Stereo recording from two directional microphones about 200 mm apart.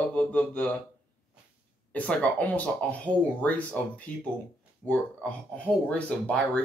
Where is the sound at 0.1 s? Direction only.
5° left (ahead or behind).